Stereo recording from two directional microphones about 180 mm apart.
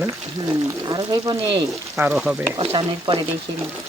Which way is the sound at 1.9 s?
5° right (ahead or behind).